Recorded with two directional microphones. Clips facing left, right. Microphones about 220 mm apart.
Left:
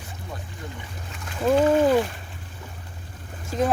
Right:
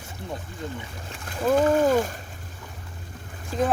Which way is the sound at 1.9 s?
45° right (ahead or behind).